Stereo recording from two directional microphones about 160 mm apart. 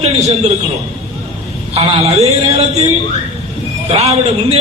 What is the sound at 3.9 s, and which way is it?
Speech, 40° right (ahead or behind).